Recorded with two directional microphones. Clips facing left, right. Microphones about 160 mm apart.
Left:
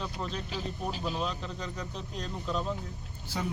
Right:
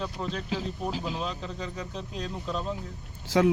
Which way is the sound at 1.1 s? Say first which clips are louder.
Right 1 dB; centre (ahead or behind).